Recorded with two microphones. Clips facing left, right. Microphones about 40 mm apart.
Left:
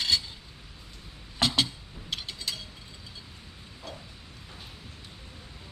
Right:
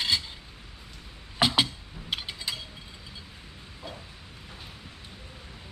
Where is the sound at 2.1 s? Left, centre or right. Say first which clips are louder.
Right 2 dB; centre.